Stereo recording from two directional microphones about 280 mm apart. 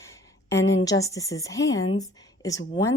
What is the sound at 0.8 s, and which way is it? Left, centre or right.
A woman's voice, centre.